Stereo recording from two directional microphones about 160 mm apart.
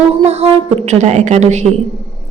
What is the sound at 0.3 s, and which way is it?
A woman's voice, 40° right (ahead or behind).